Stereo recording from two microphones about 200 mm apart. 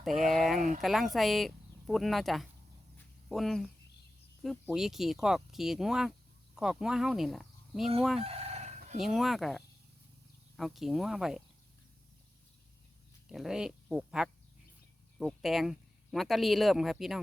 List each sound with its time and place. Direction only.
0.0 s speech: centre (ahead or behind)
4.7 s speech: centre (ahead or behind)
8.2 s chicken: 30° right (ahead or behind)
9.0 s speech: centre (ahead or behind)
13.3 s speech: centre (ahead or behind)